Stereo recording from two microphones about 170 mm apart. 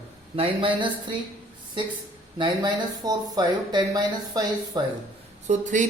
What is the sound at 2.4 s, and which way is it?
Speech, 25° right (ahead or behind).